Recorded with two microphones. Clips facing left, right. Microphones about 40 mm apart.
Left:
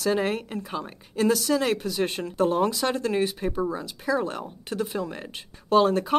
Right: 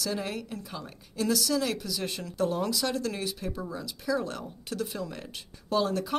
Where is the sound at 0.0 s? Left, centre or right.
Left.